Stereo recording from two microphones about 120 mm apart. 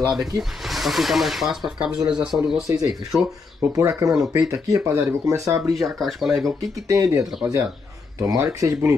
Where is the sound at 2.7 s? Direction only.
30° right (ahead or behind).